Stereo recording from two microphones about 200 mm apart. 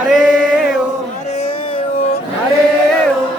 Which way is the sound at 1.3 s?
30° left (ahead or behind).